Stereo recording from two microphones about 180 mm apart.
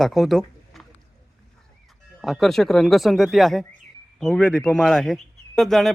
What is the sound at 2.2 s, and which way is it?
A man's voice, centre (ahead or behind).